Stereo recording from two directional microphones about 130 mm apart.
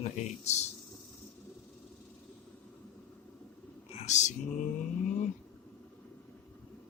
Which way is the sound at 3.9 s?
60° left (ahead or behind).